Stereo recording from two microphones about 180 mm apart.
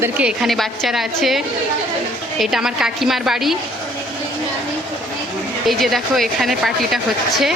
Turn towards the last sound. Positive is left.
turn(degrees=0)  # may be behind; listen again after turning